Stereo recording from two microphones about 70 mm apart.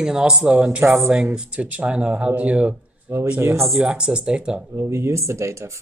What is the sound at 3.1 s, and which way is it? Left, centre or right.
Speech, right.